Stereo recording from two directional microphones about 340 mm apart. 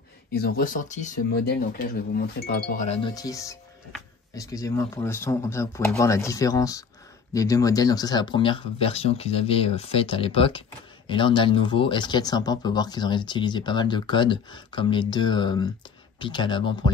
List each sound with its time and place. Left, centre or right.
0.3 s speech: left